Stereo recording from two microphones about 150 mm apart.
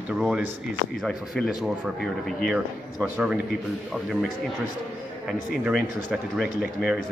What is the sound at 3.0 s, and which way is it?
Speech, 5° right (ahead or behind).